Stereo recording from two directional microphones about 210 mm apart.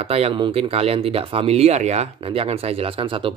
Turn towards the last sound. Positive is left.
turn(degrees=-25)  # may be behind; listen again after turning